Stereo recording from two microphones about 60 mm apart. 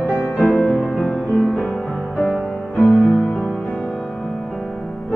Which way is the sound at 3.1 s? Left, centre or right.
Left.